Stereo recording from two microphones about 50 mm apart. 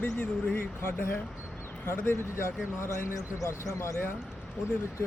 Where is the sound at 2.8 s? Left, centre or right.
Left.